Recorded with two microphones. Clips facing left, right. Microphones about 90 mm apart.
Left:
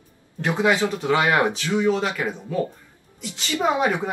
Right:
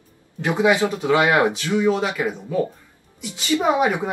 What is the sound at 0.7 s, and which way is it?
Speech, 20° right (ahead or behind).